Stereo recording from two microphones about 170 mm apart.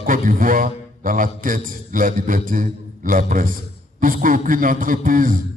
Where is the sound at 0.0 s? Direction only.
55° right (ahead or behind).